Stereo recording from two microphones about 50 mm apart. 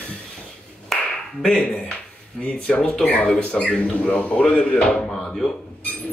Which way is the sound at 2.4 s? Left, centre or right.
Centre.